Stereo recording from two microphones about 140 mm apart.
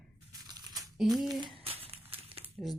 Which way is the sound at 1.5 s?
45° right (ahead or behind).